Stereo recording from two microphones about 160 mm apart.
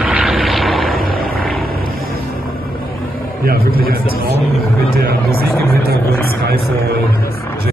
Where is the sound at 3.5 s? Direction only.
70° right (ahead or behind).